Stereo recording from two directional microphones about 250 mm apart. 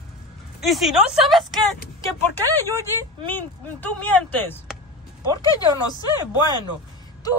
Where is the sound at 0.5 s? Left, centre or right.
Centre.